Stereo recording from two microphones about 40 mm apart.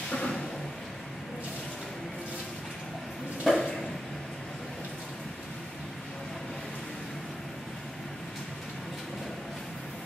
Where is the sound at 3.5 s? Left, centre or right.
Centre.